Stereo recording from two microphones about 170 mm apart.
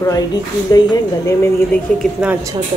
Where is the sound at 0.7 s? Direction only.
20° left (ahead or behind).